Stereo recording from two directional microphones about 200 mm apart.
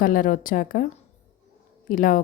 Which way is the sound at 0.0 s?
45° left (ahead or behind).